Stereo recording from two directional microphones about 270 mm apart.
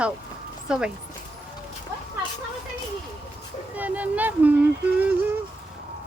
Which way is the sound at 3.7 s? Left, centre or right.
Centre.